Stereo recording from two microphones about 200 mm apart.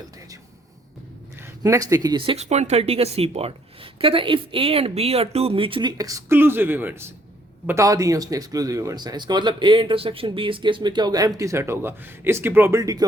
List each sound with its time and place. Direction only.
1.4 s speech: 15° right (ahead or behind)